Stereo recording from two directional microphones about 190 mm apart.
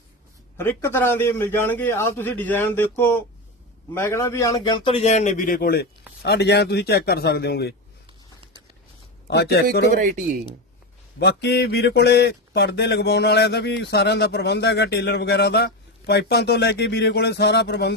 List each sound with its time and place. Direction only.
0.5 s a man's voice: 15° left (ahead or behind); by 7.8 s 60° left (ahead or behind)
9.2 s a man's voice: 60° left (ahead or behind)
9.9 s speech: 45° right (ahead or behind)
11.2 s speech: 60° left (ahead or behind)